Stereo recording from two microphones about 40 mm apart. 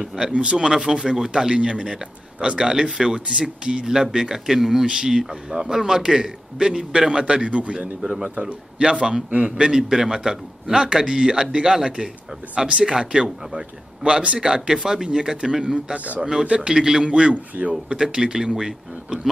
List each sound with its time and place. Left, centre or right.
0.0 s a man's voice: centre
0.3 s a man's voice: right
12.5 s speech: right
14.4 s a man's voice: centre
17.1 s speech: right
17.9 s a man's voice: centre